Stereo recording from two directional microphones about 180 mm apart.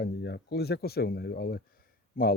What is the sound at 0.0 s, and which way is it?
Speech, 65° left (ahead or behind).